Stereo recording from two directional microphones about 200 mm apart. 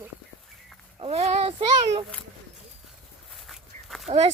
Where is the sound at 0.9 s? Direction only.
30° right (ahead or behind).